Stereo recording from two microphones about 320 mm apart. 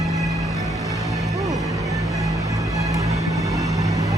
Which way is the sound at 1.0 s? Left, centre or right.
Centre.